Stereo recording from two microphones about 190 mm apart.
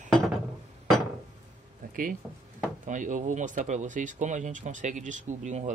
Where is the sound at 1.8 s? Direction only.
45° right (ahead or behind).